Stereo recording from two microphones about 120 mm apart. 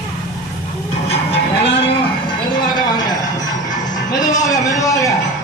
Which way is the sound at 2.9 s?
35° left (ahead or behind).